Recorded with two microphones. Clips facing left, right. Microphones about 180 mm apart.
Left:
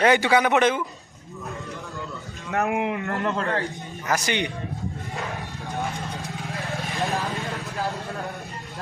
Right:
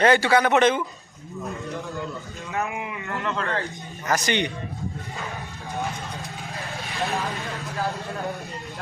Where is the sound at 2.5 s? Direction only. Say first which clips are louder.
Left 6 dB; 60° left (ahead or behind).